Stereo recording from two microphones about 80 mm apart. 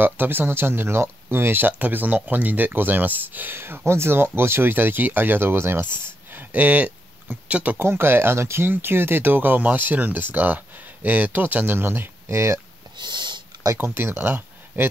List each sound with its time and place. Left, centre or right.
0.0 s speech: right
7.8 s speech: right
12.9 s a sound: right
13.7 s speech: right